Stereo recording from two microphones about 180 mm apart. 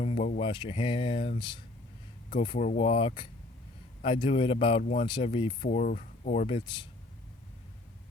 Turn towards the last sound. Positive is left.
turn(degrees=30)  # may be behind; listen again after turning